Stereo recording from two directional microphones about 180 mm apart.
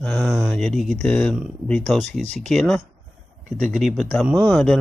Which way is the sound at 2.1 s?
40° right (ahead or behind).